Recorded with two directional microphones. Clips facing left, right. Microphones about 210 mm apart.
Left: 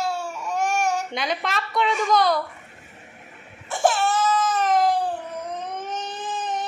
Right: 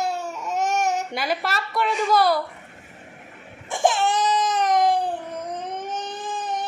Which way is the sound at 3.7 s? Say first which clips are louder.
Even; 15° right (ahead or behind).